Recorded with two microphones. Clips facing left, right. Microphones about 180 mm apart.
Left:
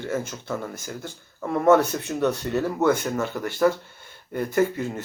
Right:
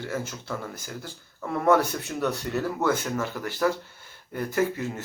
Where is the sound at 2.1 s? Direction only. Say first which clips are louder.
Left 5 dB; 10° left (ahead or behind).